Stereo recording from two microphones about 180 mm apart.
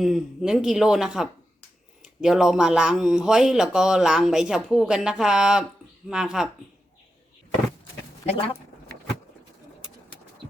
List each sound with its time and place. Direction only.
0.0 s speech: centre (ahead or behind)